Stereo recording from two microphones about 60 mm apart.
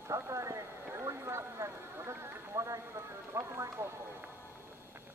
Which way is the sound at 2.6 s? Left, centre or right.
Right.